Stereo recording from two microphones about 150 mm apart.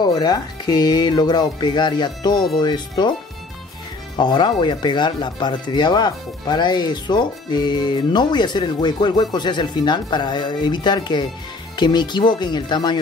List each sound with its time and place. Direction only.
0.0 s speech: 30° left (ahead or behind)
4.2 s speech: 30° left (ahead or behind)